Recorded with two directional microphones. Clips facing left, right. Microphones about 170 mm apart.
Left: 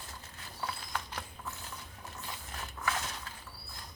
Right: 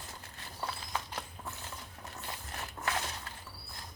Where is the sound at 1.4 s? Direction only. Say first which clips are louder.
Even; 20° right (ahead or behind).